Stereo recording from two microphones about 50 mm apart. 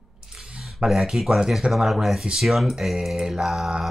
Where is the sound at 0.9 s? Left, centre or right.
Centre.